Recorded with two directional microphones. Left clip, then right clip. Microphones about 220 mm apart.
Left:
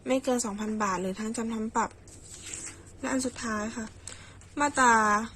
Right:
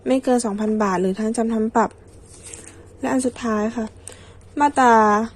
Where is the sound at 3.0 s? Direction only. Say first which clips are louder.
Right 9 dB; 25° right (ahead or behind).